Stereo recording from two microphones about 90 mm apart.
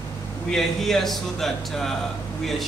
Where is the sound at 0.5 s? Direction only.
5° left (ahead or behind).